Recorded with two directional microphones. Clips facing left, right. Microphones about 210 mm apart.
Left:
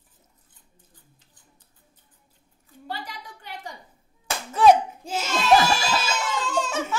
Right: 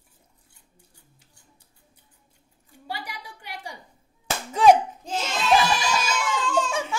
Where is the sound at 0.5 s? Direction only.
10° right (ahead or behind).